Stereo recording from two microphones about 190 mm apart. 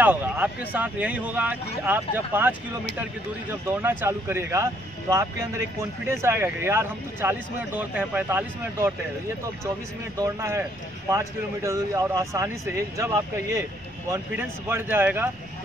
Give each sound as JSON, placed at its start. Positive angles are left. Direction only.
{"t": 0.0, "sound": "speech", "side_deg": -10}
{"t": 3.6, "sound": "speech", "side_deg": -10}
{"t": 10.1, "sound": "speech", "side_deg": -15}